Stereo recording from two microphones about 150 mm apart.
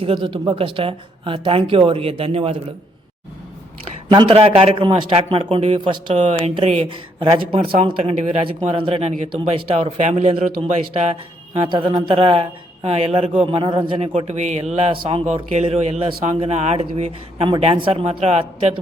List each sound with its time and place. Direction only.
0.0 s a man's voice: 35° right (ahead or behind)
4.1 s a man's voice: 35° right (ahead or behind)